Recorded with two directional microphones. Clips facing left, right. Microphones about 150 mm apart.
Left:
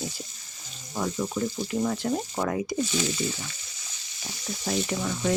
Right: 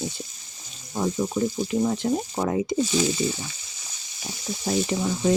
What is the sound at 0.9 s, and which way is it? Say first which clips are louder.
Speech: right 4 dB; 20° right (ahead or behind).